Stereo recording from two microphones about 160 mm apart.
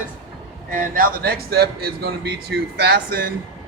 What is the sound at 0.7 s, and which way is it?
Speech, 60° right (ahead or behind).